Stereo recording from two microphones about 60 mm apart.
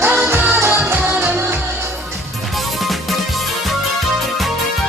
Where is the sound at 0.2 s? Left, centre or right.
Right.